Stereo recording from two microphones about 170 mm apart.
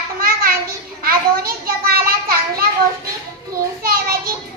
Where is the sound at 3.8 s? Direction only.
60° right (ahead or behind).